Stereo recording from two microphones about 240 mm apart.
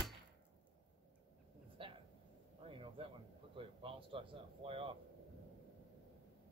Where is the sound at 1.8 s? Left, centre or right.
Right.